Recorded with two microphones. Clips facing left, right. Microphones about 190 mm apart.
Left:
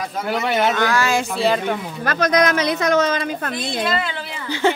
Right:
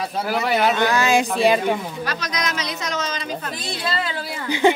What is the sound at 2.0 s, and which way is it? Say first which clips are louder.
A woman's voice: left 13 dB; 50° left (ahead or behind).